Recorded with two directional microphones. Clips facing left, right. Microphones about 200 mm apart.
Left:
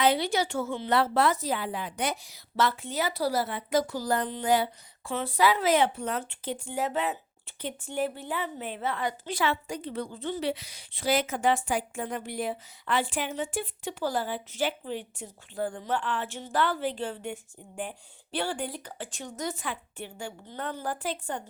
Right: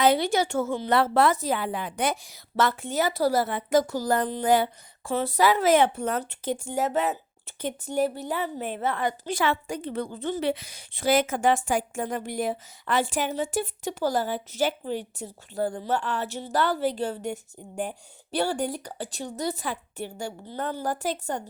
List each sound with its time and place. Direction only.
0.0 s a woman's voice: 45° right (ahead or behind)